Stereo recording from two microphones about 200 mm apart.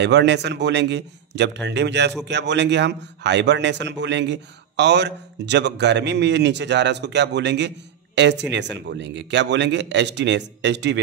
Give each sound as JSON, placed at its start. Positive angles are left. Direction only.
{"t": 0.0, "sound": "speech", "side_deg": -60}